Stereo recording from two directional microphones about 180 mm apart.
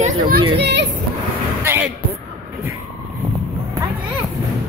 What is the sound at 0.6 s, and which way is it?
Speech, 70° right (ahead or behind).